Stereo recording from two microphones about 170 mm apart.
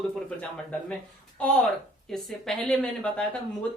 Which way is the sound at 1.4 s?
Centre (ahead or behind).